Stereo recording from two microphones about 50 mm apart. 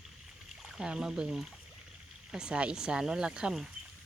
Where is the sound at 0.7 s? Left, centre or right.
Centre.